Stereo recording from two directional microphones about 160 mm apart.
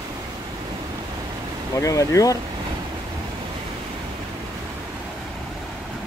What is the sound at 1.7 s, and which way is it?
Speech, 20° left (ahead or behind).